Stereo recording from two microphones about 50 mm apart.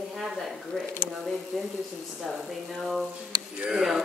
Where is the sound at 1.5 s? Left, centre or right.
Centre.